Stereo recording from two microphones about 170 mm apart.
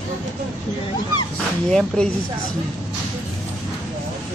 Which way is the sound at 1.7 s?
5° left (ahead or behind).